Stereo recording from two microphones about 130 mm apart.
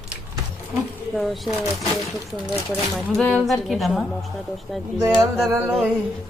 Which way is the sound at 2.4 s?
Centre (ahead or behind).